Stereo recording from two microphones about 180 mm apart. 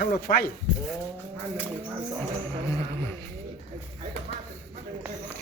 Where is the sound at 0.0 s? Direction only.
60° left (ahead or behind).